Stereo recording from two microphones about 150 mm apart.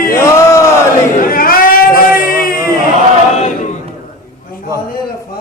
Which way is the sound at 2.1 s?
20° right (ahead or behind).